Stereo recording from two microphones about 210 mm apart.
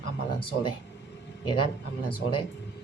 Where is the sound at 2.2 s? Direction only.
55° left (ahead or behind).